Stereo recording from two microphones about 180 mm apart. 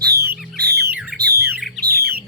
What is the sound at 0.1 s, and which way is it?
Music, 60° right (ahead or behind).